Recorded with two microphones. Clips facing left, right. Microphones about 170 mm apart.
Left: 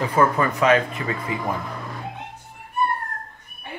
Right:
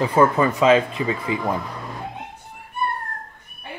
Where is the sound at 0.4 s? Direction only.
20° right (ahead or behind).